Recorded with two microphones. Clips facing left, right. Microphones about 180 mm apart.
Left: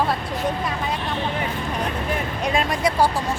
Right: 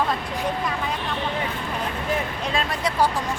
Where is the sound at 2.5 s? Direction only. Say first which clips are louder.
Left 3 dB; 10° left (ahead or behind).